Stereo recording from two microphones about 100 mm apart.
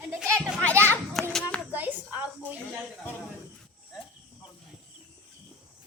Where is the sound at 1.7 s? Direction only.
15° right (ahead or behind).